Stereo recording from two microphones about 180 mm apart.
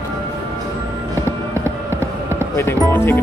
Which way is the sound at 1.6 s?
15° right (ahead or behind).